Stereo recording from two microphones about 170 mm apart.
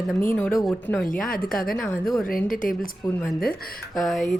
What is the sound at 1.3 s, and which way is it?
Speech, 55° left (ahead or behind).